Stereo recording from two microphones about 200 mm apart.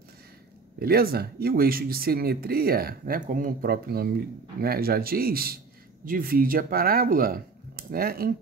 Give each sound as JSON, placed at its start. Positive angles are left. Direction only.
{"t": 0.7, "sound": "speech", "side_deg": -50}